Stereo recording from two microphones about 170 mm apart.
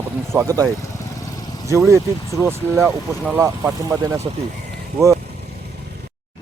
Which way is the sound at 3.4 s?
20° right (ahead or behind).